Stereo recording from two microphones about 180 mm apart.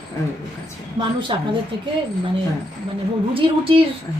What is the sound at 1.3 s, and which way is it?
Speech, 25° right (ahead or behind).